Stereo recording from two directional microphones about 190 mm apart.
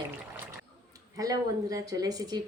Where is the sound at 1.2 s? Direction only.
20° right (ahead or behind).